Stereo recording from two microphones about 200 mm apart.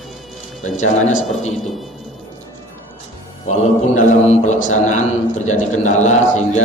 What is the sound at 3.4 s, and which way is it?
A man's voice, 35° left (ahead or behind).